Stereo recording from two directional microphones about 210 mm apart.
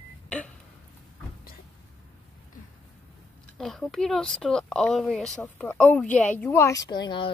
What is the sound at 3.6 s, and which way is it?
Speech, centre (ahead or behind).